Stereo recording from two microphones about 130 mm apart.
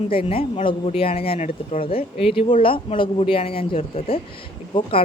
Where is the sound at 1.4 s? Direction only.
65° left (ahead or behind).